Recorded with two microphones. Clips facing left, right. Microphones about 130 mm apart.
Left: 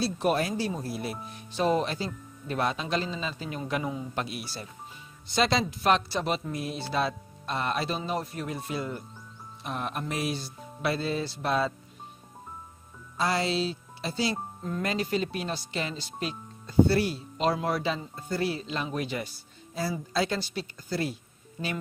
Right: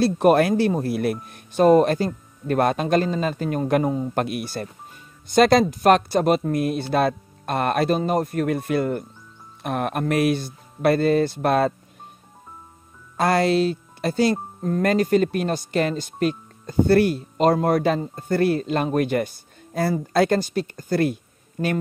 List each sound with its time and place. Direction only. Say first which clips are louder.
0.0 s speech: right 10 dB; 55° right (ahead or behind)
13.2 s speech: right 9 dB; 55° right (ahead or behind)